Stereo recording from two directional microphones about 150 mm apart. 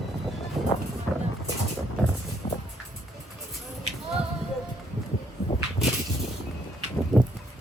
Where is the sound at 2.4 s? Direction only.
30° left (ahead or behind).